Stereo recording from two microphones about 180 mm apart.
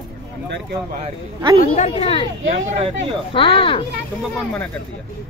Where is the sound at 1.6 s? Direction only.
40° left (ahead or behind).